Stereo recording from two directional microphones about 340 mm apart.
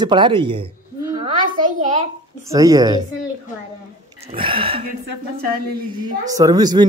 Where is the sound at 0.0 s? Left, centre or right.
Centre.